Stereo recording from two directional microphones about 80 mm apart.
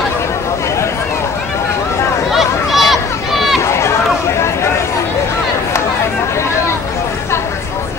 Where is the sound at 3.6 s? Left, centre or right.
Left.